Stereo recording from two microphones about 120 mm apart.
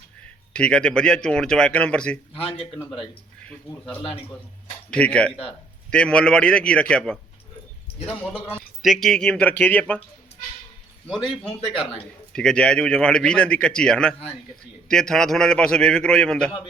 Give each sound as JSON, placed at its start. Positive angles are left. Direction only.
{"t": 0.5, "sound": "a man's voice", "side_deg": 10}
{"t": 2.3, "sound": "speech", "side_deg": 50}
{"t": 4.9, "sound": "a man's voice", "side_deg": 10}
{"t": 8.8, "sound": "a man's voice", "side_deg": 0}
{"t": 11.8, "sound": "a man's voice", "side_deg": 5}